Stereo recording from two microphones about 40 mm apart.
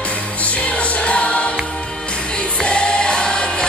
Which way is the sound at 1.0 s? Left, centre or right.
Left.